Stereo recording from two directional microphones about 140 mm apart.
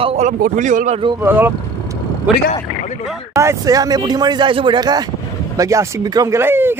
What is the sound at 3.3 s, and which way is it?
Speech, 25° right (ahead or behind).